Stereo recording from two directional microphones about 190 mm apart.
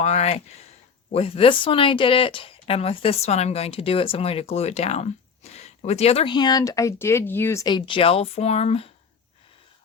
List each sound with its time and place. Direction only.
0.0 s speech: 35° left (ahead or behind)